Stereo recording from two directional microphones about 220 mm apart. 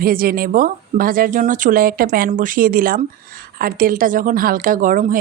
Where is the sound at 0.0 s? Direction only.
40° right (ahead or behind).